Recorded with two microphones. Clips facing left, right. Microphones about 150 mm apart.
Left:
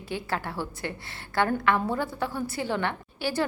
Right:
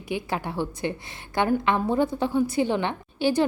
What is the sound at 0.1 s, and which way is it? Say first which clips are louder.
A woman's voice: right 3 dB; 15° right (ahead or behind).